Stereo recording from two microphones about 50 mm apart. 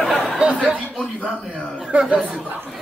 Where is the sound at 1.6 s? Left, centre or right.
Centre.